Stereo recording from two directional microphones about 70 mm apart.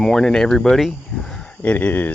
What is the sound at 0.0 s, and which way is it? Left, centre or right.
Speech, centre.